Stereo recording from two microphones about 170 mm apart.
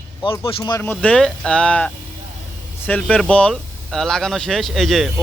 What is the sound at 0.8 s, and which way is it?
Speech, 10° left (ahead or behind).